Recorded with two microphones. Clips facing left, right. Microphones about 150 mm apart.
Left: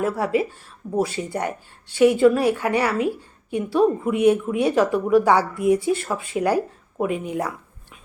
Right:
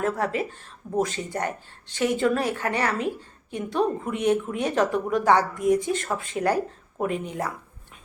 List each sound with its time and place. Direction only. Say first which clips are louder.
0.0 s a woman's voice: left 4 dB; 10° left (ahead or behind)